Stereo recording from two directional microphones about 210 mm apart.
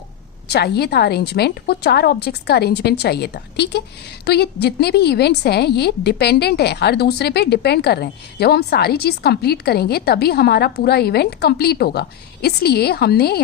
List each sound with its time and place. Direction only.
0.4 s a woman's voice: 50° left (ahead or behind)